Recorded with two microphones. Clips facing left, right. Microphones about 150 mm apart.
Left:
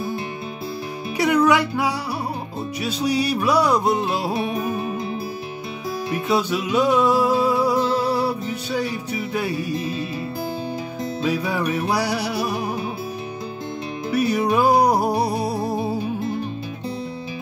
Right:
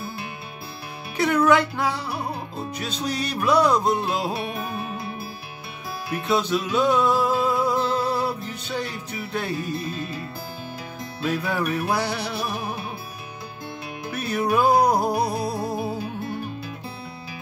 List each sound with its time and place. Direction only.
1.1 s music: 10° left (ahead or behind)
6.2 s music: 10° left (ahead or behind)
11.2 s music: 10° left (ahead or behind)
14.1 s music: 10° left (ahead or behind)
15.1 s music: 30° left (ahead or behind)